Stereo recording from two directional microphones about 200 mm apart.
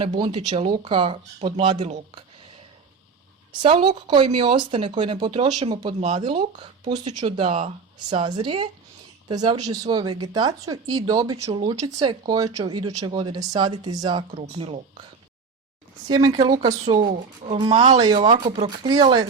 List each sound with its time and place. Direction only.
0.0 s speech: 25° right (ahead or behind)
3.6 s speech: 25° right (ahead or behind)
16.0 s speech: 20° right (ahead or behind)